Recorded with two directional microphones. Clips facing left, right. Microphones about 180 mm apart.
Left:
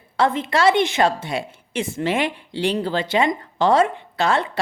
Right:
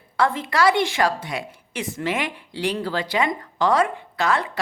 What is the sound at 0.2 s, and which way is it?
A woman's voice, 20° left (ahead or behind).